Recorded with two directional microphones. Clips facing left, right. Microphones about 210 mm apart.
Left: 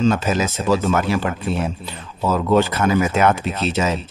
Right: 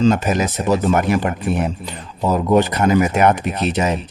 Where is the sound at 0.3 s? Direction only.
15° right (ahead or behind).